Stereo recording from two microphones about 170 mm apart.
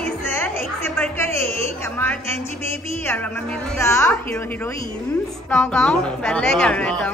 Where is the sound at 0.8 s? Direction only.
10° left (ahead or behind).